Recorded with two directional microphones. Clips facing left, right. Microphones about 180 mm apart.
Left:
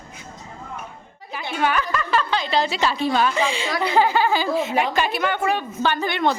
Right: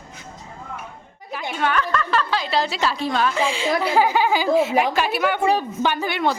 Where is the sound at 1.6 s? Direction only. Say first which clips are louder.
Even; 5° left (ahead or behind).